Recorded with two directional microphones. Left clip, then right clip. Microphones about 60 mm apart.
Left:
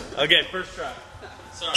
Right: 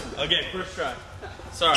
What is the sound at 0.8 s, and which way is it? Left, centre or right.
Speech, right.